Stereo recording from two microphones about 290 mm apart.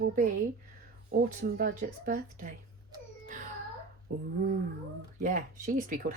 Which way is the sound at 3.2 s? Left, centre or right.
Right.